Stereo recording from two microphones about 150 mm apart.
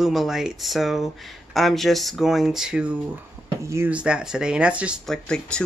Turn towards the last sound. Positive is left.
turn(degrees=5)  # may be behind; listen again after turning